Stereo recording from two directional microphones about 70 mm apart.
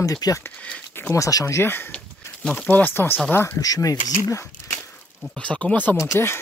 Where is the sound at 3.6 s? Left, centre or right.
Left.